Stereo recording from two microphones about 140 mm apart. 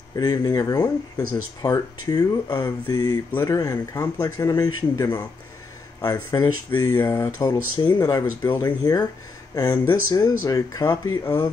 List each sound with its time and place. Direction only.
0.1 s speech: 25° left (ahead or behind)
6.4 s speech: 30° left (ahead or behind)